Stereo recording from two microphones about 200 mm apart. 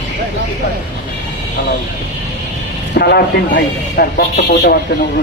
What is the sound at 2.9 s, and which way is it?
Speech, 55° left (ahead or behind).